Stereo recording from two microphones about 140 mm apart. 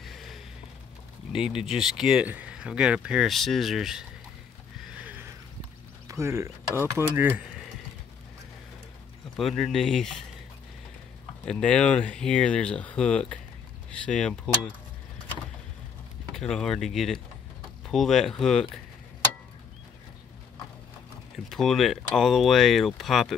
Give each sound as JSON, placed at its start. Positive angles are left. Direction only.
{"t": 0.0, "sound": "a sound", "side_deg": 0}
{"t": 1.3, "sound": "speech", "side_deg": -5}
{"t": 4.8, "sound": "a sound", "side_deg": -10}
{"t": 6.0, "sound": "speech", "side_deg": -20}
{"t": 9.4, "sound": "speech", "side_deg": 0}
{"t": 11.4, "sound": "speech", "side_deg": 5}
{"t": 16.3, "sound": "speech", "side_deg": 5}
{"t": 21.5, "sound": "speech", "side_deg": 0}